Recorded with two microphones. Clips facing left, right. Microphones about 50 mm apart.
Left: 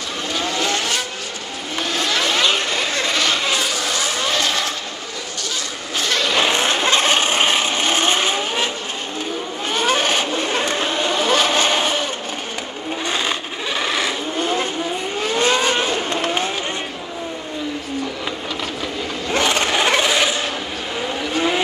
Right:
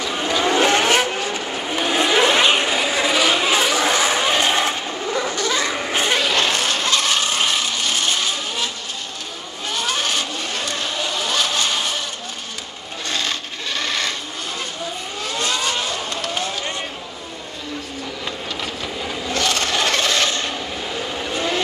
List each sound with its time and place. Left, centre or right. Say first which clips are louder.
0.2 s vehicle: right 5 dB; right
1.8 s vehicle: right 4 dB; centre
3.6 s vehicle: right 4 dB; right
6.3 s vehicle: left 2 dB; centre
6.6 s vehicle: left 3 dB; left
9.8 s vehicle: left 5 dB; left
13.7 s vehicle: left 2 dB; centre
14.4 s vehicle: left 11 dB; left
15.2 s car: left 5 dB; left
19.3 s a sound: left 3 dB; left
21.3 s vehicle: left 4 dB; centre